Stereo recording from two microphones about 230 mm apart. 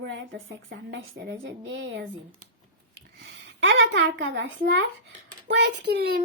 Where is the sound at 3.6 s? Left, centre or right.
Right.